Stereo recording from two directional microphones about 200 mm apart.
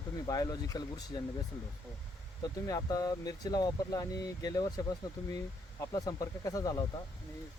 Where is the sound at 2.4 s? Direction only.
15° left (ahead or behind).